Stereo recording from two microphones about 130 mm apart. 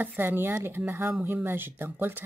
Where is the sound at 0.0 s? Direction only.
15° right (ahead or behind).